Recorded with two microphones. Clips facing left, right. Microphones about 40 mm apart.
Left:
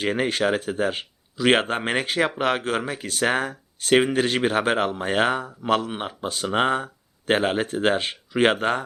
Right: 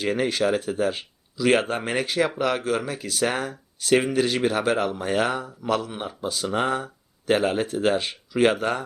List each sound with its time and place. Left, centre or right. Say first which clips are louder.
0.0 s speech: even; left